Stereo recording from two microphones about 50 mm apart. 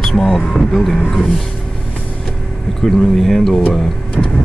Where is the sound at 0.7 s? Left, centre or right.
Centre.